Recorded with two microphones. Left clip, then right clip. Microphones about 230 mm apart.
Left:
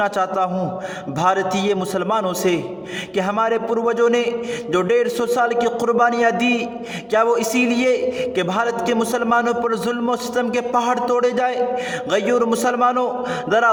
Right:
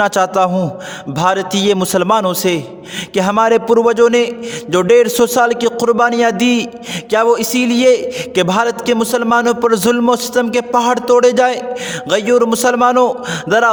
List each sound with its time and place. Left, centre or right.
0.0 s a man's voice: right